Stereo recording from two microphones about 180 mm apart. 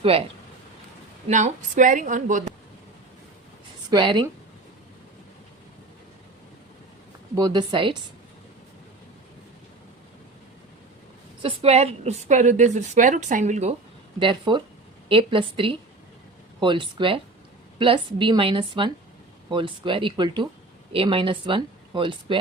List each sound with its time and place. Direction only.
0.0 s a woman's voice: 30° right (ahead or behind)
1.3 s a woman's voice: 45° right (ahead or behind)
3.8 s speech: 25° right (ahead or behind)
7.3 s speech: 25° right (ahead or behind)
11.4 s a woman's voice: 35° right (ahead or behind)
14.2 s speech: 25° right (ahead or behind)